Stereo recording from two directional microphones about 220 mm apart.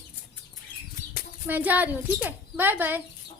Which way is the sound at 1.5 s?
10° right (ahead or behind).